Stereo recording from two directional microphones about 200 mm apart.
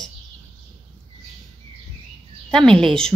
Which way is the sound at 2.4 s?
5° left (ahead or behind).